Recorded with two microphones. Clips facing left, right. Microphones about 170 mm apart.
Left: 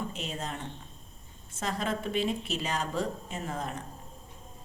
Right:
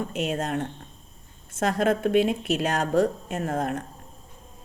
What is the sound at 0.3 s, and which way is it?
Speech, 50° right (ahead or behind).